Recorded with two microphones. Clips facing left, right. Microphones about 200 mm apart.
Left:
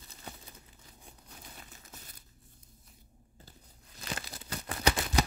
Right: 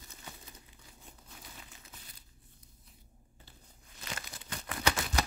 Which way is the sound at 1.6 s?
45° left (ahead or behind).